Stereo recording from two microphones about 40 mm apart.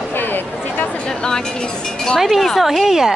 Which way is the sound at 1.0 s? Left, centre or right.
Centre.